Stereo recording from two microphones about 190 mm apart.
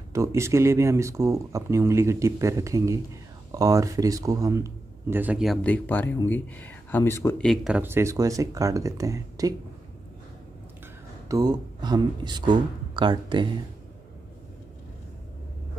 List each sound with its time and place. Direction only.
0.1 s speech: 15° right (ahead or behind)
11.2 s speech: 20° right (ahead or behind)